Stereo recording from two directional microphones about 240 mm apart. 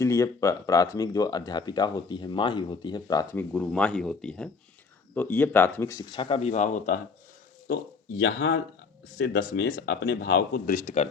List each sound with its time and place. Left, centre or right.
0.0 s speech: centre
3.5 s speech: centre; by 7.0 s left
8.2 s speech: left